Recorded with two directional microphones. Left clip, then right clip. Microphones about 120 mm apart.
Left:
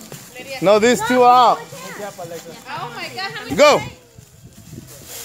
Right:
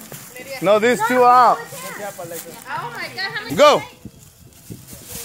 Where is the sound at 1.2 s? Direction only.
5° left (ahead or behind).